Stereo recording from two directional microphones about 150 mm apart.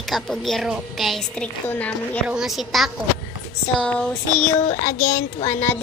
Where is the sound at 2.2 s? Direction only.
5° right (ahead or behind).